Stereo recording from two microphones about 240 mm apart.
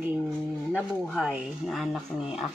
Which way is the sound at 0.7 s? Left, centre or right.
Centre.